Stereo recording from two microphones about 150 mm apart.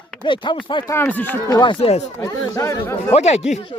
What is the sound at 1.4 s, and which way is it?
Speech, 30° left (ahead or behind).